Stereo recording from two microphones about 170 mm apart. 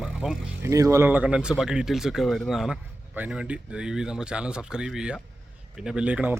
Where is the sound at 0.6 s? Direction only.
20° right (ahead or behind).